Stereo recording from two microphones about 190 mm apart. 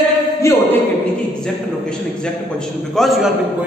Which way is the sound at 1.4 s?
5° left (ahead or behind).